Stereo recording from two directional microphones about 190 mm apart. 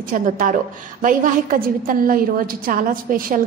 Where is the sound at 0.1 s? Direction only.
45° right (ahead or behind).